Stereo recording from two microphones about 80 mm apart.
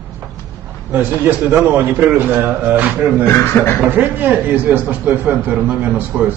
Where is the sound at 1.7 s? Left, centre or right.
Right.